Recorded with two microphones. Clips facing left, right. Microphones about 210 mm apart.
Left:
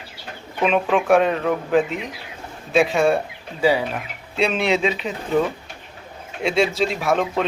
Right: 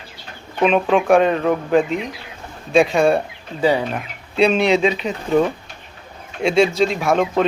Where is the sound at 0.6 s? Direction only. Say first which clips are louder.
Right 3 dB; 35° right (ahead or behind).